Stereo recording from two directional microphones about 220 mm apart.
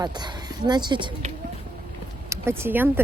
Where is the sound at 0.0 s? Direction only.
20° right (ahead or behind).